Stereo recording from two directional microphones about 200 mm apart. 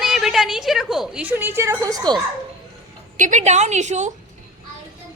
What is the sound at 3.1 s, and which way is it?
Speech, 40° right (ahead or behind).